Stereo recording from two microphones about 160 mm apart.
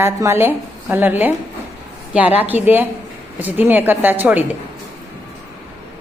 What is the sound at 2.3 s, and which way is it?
A woman's voice, 10° right (ahead or behind).